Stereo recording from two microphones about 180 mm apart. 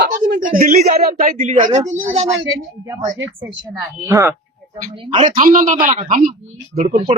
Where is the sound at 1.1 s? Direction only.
40° right (ahead or behind).